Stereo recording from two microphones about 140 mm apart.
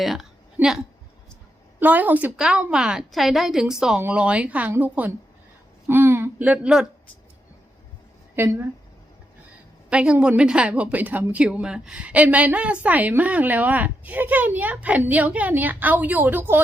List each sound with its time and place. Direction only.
0.0 s a woman's voice: centre (ahead or behind)
8.4 s a woman's voice: 15° right (ahead or behind)
9.9 s a woman's voice: 10° right (ahead or behind)